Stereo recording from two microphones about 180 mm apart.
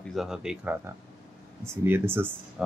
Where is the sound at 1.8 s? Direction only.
10° right (ahead or behind).